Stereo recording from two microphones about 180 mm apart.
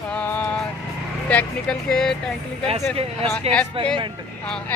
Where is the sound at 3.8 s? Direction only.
30° right (ahead or behind).